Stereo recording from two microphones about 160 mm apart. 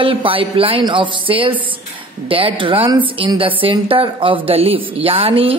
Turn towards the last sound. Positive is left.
turn(degrees=-35)  # may be behind; listen again after turning